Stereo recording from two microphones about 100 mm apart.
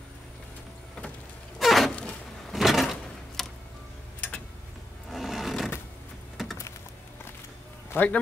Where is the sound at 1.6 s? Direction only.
Centre (ahead or behind).